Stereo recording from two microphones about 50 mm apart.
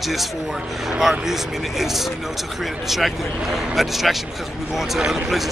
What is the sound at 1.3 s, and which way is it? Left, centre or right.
Speech, centre.